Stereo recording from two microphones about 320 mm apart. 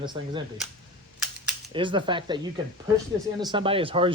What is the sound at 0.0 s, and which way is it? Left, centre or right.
Speech, centre.